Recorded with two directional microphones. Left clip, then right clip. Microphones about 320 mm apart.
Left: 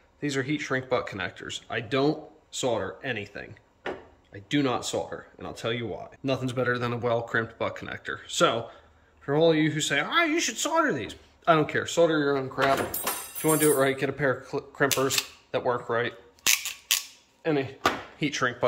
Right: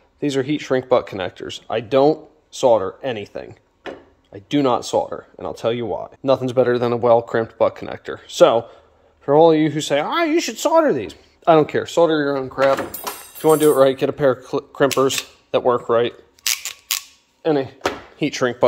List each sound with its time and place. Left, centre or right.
0.2 s speech: right
17.4 s speech: centre